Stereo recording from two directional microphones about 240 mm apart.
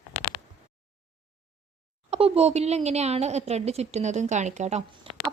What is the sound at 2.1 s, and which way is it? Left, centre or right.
Speech, right.